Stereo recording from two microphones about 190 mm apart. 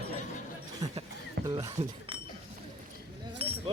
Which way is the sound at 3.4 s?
30° right (ahead or behind).